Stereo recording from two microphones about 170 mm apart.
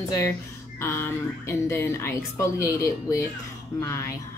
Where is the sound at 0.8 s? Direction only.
15° left (ahead or behind).